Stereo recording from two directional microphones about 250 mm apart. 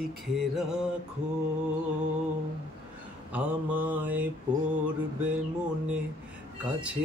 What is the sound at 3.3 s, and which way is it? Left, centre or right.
Mantra, centre.